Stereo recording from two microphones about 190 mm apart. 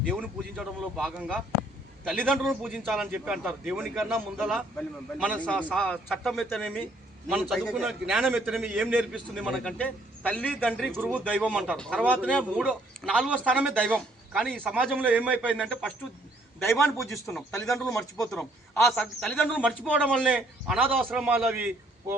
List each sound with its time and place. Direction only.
0.0 s a man's voice: centre (ahead or behind)
5.5 s a man's voice: 5° right (ahead or behind)
5.8 s a man's voice: 5° left (ahead or behind)
15.3 s a man's voice: 5° left (ahead or behind)
17.5 s speech: 15° left (ahead or behind)
18.3 s a man's voice: 5° left (ahead or behind)
19.6 s a man's voice: 5° right (ahead or behind)
20.3 s a man's voice: 5° right (ahead or behind)